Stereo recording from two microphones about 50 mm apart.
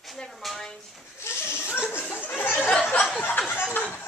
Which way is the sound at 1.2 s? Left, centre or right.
Left.